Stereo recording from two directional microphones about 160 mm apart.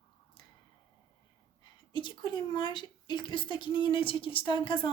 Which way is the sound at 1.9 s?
30° left (ahead or behind).